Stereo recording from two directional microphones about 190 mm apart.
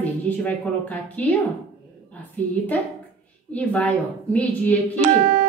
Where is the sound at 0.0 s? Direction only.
10° left (ahead or behind).